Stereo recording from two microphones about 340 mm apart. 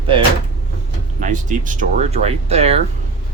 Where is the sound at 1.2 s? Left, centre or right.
Right.